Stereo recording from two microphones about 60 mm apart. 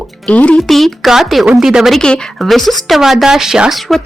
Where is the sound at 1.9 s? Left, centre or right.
Centre.